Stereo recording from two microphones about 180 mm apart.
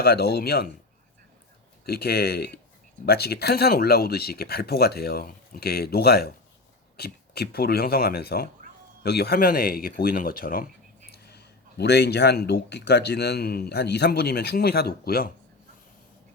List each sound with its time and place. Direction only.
0.0 s speech: 60° left (ahead or behind)
1.8 s speech: 60° left (ahead or behind)
11.1 s speech: 65° left (ahead or behind)